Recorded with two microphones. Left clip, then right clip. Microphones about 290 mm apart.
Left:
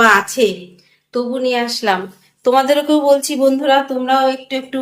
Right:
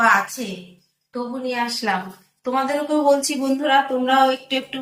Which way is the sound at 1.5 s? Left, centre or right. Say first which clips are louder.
Left 4 dB; left.